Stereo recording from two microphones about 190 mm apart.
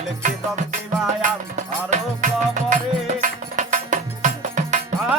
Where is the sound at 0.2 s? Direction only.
40° right (ahead or behind).